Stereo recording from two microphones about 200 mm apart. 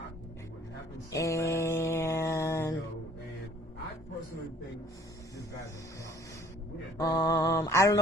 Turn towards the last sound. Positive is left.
turn(degrees=15)  # may be behind; listen again after turning